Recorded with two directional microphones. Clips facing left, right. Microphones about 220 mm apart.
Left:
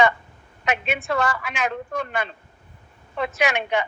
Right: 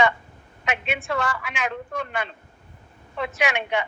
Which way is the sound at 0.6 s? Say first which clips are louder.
Left 3 dB; 40° left (ahead or behind).